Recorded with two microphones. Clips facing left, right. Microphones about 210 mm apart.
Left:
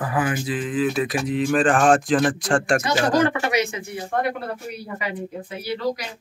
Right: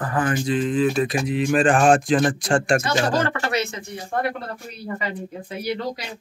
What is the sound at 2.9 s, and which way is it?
Speech, 15° left (ahead or behind).